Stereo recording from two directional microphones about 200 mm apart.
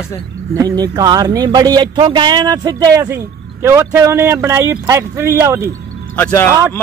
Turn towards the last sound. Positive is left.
turn(degrees=10)  # may be behind; listen again after turning